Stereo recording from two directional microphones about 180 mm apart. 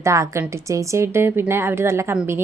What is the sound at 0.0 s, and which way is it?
A woman's voice, 15° right (ahead or behind).